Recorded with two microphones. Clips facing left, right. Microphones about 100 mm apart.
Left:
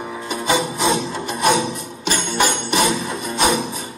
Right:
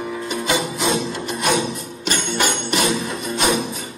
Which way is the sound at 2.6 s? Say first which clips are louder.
Left 2 dB; 45° left (ahead or behind).